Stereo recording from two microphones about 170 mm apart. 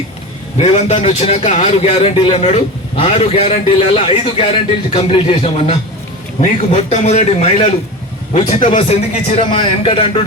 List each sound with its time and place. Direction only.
0.6 s a man's voice: 40° left (ahead or behind)